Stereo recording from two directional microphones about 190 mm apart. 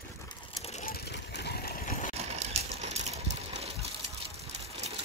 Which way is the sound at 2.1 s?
35° right (ahead or behind).